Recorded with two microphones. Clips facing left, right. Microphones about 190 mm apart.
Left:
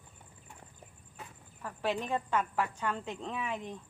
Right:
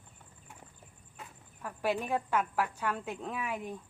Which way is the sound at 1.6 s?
10° right (ahead or behind).